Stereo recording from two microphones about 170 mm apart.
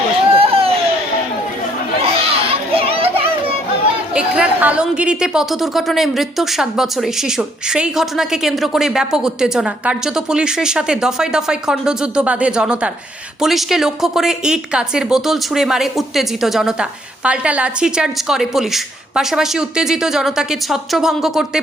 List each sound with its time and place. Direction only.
0.3 s a sound: 35° right (ahead or behind)
2.0 s children playing: 35° right (ahead or behind)
4.1 s a woman's voice: 5° right (ahead or behind)